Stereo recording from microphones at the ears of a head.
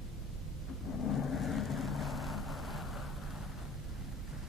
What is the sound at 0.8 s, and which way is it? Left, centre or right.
Vehicle, left.